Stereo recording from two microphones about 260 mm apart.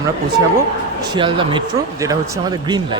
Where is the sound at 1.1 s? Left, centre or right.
Centre.